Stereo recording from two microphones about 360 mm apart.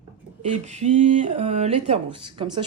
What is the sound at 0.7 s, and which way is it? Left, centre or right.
Speech, centre.